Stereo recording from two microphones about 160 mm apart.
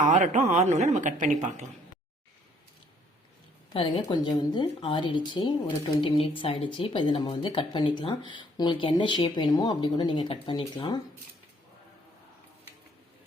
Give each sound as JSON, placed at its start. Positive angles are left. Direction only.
{"t": 0.1, "sound": "a woman's voice", "side_deg": -50}
{"t": 3.7, "sound": "a woman's voice", "side_deg": 35}